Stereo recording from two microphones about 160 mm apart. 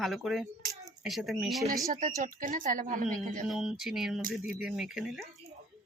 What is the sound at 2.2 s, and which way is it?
Speech, 55° right (ahead or behind).